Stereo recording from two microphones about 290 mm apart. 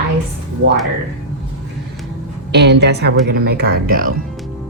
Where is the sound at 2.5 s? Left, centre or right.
Right.